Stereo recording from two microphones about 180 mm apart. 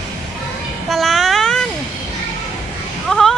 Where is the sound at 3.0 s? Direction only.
Centre (ahead or behind).